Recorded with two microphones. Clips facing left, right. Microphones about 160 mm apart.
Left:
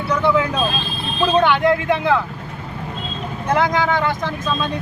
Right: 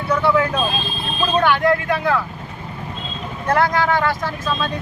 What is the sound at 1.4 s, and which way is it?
Speech, 20° left (ahead or behind).